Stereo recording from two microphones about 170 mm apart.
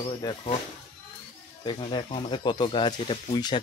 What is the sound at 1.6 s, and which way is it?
Speech, 30° left (ahead or behind).